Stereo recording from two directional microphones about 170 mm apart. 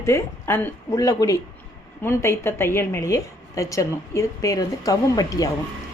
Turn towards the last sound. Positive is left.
turn(degrees=20)  # may be behind; listen again after turning